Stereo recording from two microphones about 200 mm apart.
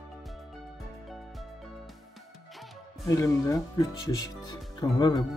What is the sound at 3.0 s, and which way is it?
Speech, 15° left (ahead or behind).